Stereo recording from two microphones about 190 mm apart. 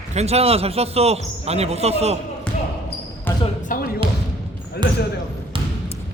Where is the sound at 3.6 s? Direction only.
50° left (ahead or behind).